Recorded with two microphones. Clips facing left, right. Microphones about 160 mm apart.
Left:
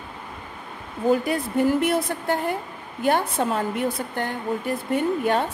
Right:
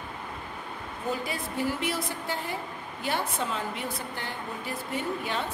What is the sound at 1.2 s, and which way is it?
A woman's voice, 55° left (ahead or behind).